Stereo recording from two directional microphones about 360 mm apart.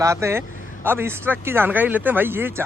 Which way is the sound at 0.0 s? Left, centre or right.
Centre.